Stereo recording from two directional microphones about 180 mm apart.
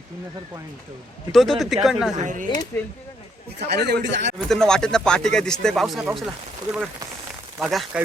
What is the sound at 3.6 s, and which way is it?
Speech, 65° right (ahead or behind).